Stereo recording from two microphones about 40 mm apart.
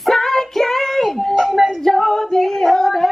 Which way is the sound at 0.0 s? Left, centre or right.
Centre.